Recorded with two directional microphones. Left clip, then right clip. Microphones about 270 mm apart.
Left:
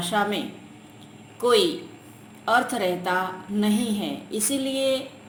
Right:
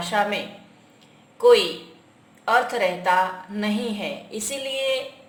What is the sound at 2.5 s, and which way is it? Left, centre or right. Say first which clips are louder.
Speech: right 2 dB; left.